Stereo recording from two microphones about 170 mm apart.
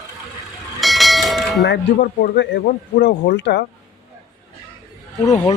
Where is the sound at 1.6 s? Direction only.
75° left (ahead or behind).